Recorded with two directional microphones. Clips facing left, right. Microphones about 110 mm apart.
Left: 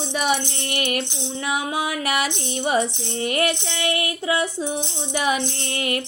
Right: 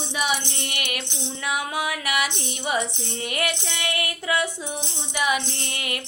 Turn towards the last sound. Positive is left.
turn(degrees=35)  # may be behind; listen again after turning